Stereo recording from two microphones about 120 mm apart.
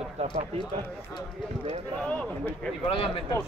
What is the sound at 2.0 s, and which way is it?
Speech, 10° left (ahead or behind).